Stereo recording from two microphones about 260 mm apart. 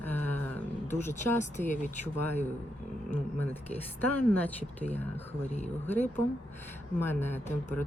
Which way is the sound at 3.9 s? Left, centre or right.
Centre.